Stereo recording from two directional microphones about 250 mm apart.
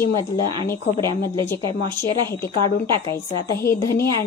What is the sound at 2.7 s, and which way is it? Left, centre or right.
A woman's voice, left.